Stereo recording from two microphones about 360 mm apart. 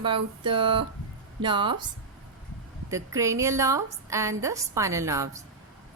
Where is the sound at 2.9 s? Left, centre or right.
Centre.